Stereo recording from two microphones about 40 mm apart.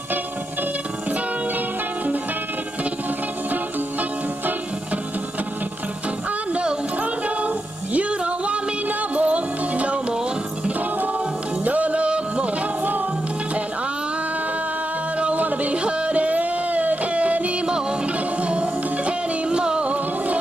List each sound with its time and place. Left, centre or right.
7.0 s music: right
11.6 s music: right
15.1 s music: right